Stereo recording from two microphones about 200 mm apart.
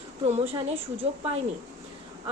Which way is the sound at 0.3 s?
30° right (ahead or behind).